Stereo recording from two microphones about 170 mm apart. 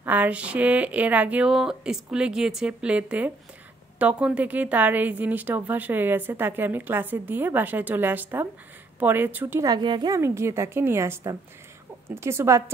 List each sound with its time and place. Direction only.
0.0 s a woman's voice: 10° right (ahead or behind)